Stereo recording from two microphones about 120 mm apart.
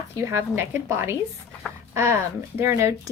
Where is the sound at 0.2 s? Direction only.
20° right (ahead or behind).